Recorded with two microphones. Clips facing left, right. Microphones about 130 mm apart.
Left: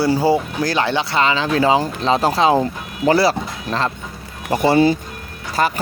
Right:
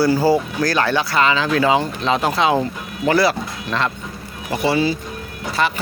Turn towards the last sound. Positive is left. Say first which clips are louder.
# left 1 dB
turn(degrees=40)  # may be behind; listen again after turning